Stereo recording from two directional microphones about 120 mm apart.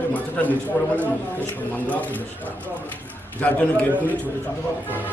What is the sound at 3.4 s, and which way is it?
Speech, 10° left (ahead or behind).